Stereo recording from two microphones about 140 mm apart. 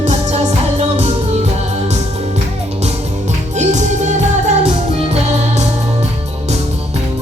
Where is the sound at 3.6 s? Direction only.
55° right (ahead or behind).